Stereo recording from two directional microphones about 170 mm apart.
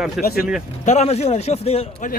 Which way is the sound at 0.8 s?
40° left (ahead or behind).